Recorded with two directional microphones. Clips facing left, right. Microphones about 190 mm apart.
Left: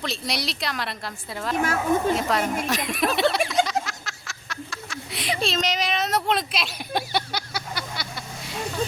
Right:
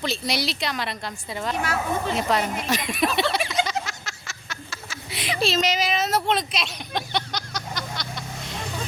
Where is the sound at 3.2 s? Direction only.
Centre (ahead or behind).